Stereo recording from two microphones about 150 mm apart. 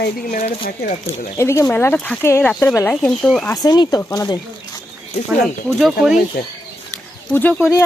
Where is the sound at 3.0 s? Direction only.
5° left (ahead or behind).